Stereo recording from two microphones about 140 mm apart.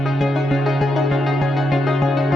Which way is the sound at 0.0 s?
Centre (ahead or behind).